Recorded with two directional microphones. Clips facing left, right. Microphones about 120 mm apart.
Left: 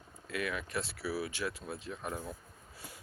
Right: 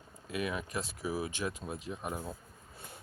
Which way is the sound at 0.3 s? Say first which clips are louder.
Right 1 dB; 20° right (ahead or behind).